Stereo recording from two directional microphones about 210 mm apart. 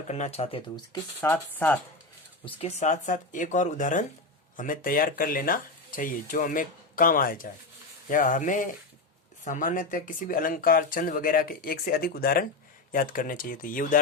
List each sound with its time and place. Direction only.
0.1 s speech: 30° left (ahead or behind)
1.2 s speech: 10° left (ahead or behind)
2.4 s speech: 30° left (ahead or behind)